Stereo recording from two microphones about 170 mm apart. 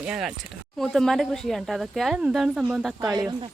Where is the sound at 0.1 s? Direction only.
5° right (ahead or behind).